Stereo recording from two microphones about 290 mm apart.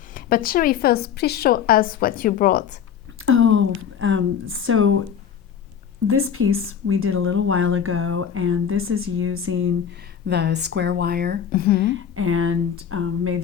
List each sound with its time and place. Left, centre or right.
0.1 s a woman's voice: left
3.2 s a sound: right
6.1 s speech: right
11.5 s speech: left
11.9 s speech: right